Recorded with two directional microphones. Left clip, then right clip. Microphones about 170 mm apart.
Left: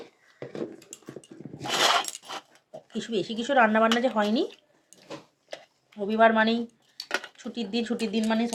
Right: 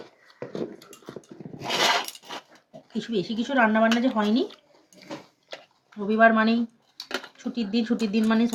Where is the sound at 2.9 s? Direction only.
90° left.